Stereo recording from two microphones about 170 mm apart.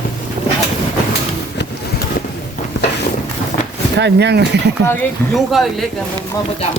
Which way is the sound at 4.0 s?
85° right.